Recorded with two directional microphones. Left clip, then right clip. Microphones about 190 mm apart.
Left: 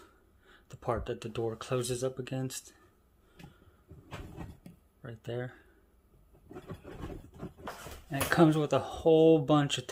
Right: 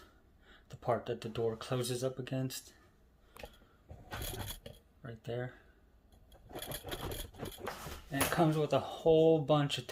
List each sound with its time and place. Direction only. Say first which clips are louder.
0.4 s speech: even; 25° left (ahead or behind)
5.0 s speech: left 2 dB; 35° left (ahead or behind)
8.1 s speech: left 5 dB; 50° left (ahead or behind)